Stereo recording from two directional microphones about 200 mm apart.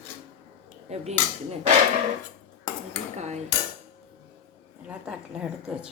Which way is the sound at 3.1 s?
35° right (ahead or behind).